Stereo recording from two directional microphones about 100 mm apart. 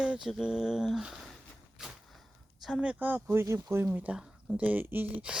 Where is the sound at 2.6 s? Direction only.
10° right (ahead or behind).